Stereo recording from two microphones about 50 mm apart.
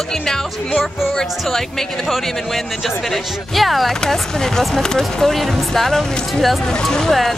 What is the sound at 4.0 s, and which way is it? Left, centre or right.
Speech, centre.